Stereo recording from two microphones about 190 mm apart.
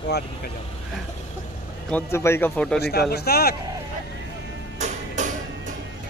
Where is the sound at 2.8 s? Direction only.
55° left (ahead or behind).